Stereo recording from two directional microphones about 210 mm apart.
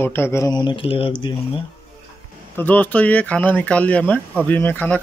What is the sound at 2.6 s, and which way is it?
Speech, 10° left (ahead or behind).